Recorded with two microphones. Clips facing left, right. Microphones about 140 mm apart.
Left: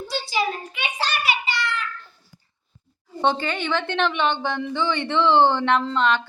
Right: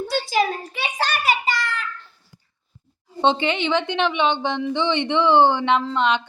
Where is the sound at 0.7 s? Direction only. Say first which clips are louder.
Right 3 dB; 35° right (ahead or behind).